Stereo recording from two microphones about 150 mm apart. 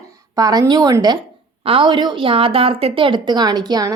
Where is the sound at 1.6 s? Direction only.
35° right (ahead or behind).